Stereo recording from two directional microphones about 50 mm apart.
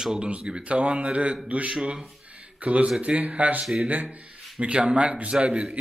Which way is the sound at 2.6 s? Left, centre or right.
Right.